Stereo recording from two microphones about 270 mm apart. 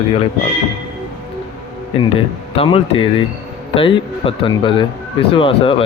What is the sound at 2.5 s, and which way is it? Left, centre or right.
Speech, left.